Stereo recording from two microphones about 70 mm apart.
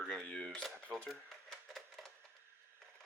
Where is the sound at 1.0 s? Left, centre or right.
Centre.